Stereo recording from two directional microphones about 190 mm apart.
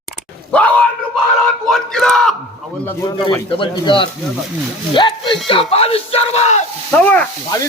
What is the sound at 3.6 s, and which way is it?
Speech, 25° left (ahead or behind).